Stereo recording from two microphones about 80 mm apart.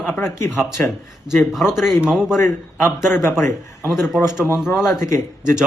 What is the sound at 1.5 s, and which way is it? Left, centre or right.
A man's voice, centre.